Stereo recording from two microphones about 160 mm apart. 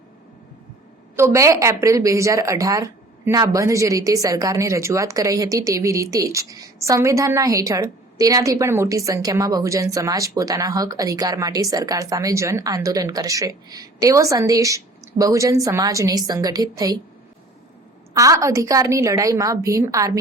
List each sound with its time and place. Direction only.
1.1 s a woman's voice: 15° right (ahead or behind)
18.1 s a woman's voice: 20° right (ahead or behind)